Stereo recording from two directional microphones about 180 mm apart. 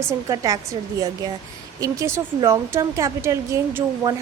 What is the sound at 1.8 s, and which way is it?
Speech, 15° right (ahead or behind).